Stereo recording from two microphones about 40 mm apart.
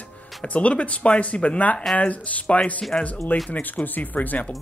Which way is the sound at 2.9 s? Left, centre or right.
Left.